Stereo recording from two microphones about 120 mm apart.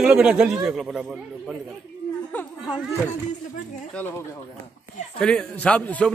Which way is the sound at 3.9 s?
20° left (ahead or behind).